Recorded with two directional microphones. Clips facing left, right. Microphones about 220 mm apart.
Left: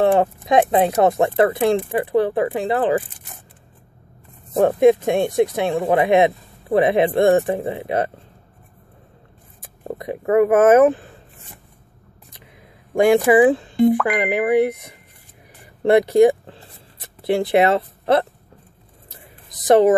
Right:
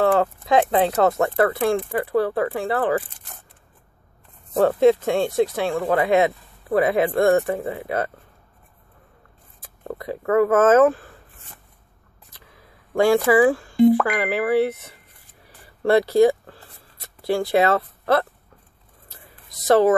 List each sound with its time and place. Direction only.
0.0 s speech: 20° left (ahead or behind)
4.6 s speech: 15° left (ahead or behind)
9.8 s speech: 20° left (ahead or behind)
12.3 s music: 15° left (ahead or behind)
14.0 s speech: 20° left (ahead or behind)
15.8 s a sound: 20° left (ahead or behind)
19.6 s speech: 20° left (ahead or behind)